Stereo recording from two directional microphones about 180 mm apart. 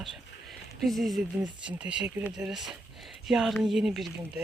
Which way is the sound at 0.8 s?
Centre (ahead or behind).